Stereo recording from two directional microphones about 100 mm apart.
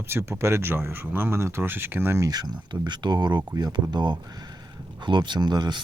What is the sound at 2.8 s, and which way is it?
Speech, 45° right (ahead or behind).